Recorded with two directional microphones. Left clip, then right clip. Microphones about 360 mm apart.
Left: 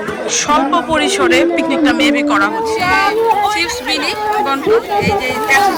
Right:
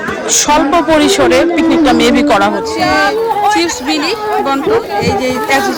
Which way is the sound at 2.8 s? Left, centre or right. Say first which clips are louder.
Right 2 dB; centre.